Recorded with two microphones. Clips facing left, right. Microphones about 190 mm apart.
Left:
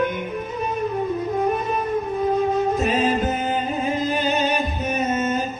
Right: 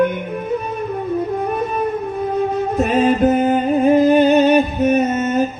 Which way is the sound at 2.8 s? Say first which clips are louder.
Right 6 dB; 60° right (ahead or behind).